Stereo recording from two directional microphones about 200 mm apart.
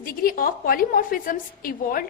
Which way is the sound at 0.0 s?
45° left (ahead or behind).